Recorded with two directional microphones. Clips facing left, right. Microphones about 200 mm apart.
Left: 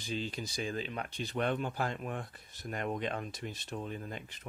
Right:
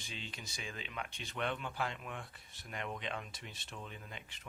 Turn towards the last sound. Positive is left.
turn(degrees=40)  # may be behind; listen again after turning